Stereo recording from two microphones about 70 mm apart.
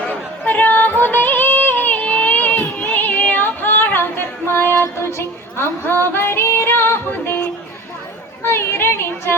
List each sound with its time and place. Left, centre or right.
0.0 s yodeling: left
2.7 s female singing: left
6.1 s music: left
8.4 s a sound: left